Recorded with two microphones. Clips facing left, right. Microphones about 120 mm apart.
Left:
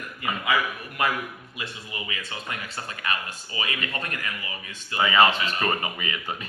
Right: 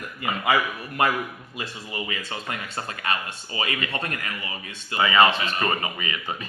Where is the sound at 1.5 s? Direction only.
40° right (ahead or behind).